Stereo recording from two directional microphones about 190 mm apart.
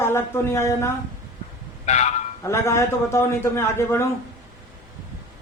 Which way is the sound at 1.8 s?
35° left (ahead or behind).